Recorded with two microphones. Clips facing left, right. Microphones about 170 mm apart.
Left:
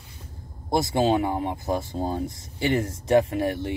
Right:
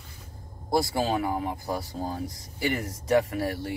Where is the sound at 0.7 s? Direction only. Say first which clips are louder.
Left 4 dB; 20° left (ahead or behind).